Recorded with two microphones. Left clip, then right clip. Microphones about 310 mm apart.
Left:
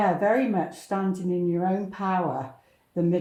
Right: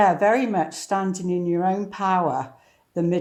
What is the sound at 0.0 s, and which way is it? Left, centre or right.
Speech, right.